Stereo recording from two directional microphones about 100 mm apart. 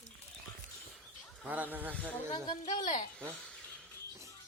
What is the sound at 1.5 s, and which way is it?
Speech, 20° right (ahead or behind).